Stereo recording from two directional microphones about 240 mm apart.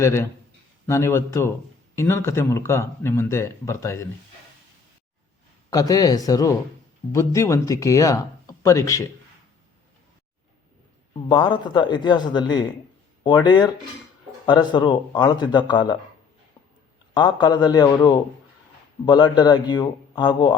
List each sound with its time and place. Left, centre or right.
0.0 s speech: centre
5.7 s speech: centre
11.3 s speech: centre
17.2 s speech: centre